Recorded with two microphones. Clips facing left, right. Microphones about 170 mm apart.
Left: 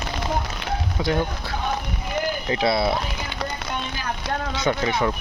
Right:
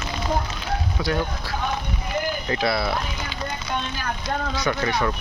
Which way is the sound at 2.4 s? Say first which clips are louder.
Left 4 dB; 20° left (ahead or behind).